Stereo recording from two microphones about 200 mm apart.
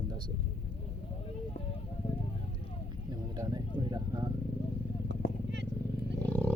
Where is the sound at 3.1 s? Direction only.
20° right (ahead or behind).